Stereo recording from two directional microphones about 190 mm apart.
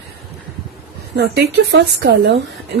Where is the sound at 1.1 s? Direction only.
60° right (ahead or behind).